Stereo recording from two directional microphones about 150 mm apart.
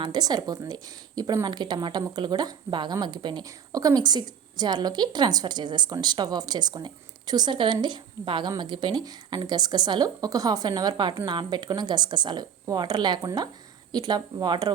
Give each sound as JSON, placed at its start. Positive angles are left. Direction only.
{"t": 0.0, "sound": "a woman's voice", "side_deg": -30}